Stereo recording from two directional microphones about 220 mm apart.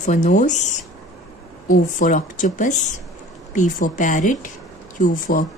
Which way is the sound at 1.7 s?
35° left (ahead or behind).